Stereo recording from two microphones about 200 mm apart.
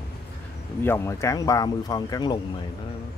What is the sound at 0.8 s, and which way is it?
Speech, 15° left (ahead or behind).